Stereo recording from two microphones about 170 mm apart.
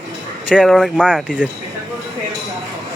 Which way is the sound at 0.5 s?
Centre (ahead or behind).